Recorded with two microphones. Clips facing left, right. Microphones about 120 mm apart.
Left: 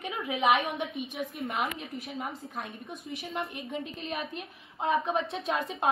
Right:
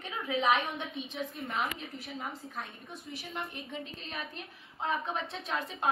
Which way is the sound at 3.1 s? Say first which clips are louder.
Left 5 dB; 20° left (ahead or behind).